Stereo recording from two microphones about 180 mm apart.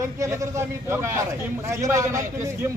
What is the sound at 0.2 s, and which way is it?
A man's voice, 15° right (ahead or behind).